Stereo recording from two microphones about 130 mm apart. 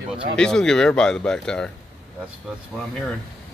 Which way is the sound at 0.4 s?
5° left (ahead or behind).